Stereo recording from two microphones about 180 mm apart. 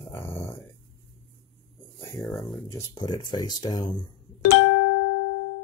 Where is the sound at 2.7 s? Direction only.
20° left (ahead or behind).